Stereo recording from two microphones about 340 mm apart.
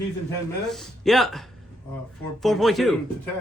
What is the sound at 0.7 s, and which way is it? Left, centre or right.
Speech, centre.